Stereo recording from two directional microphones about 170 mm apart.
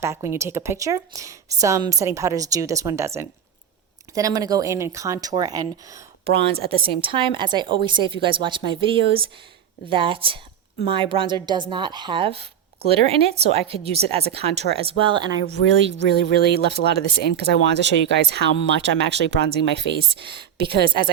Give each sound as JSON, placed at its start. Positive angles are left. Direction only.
{"t": 0.0, "sound": "a woman's voice", "side_deg": -15}
{"t": 15.6, "sound": "speech", "side_deg": -90}